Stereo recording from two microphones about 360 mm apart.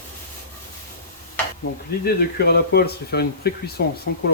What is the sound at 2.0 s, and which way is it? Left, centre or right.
Speech, left.